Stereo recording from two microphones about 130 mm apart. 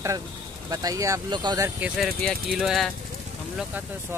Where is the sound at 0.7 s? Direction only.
30° right (ahead or behind).